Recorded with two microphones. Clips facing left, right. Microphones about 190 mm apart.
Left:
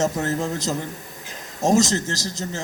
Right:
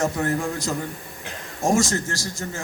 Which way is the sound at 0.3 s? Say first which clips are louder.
Even; 20° left (ahead or behind).